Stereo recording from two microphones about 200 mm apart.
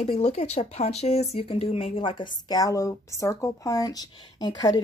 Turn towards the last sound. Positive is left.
turn(degrees=20)  # may be behind; listen again after turning